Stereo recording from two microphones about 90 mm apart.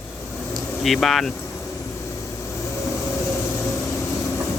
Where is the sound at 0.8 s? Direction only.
Centre (ahead or behind).